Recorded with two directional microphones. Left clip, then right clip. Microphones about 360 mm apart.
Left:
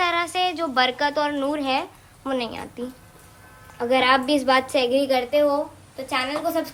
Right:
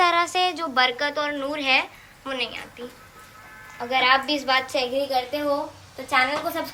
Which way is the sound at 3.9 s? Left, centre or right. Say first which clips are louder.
Left 1 dB; centre.